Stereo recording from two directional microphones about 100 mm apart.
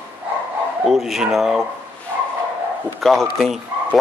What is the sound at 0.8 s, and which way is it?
Speech, centre (ahead or behind).